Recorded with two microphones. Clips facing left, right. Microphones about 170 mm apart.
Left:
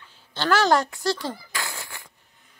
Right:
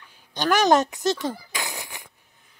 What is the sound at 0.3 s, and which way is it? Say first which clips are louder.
A woman's voice: right 1 dB; 15° right (ahead or behind).